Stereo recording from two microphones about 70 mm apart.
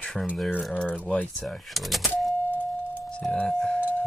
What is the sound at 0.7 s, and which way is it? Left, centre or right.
Speech, centre.